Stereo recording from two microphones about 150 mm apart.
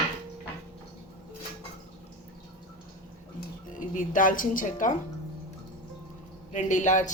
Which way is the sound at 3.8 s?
60° left (ahead or behind).